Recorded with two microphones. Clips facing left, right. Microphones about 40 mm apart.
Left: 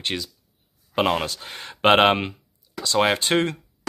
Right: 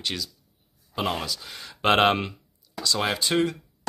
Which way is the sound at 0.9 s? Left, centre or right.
Left.